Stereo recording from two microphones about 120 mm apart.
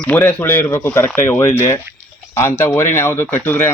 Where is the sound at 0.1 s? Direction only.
15° left (ahead or behind).